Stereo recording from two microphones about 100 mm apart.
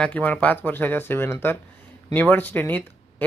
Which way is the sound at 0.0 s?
15° left (ahead or behind).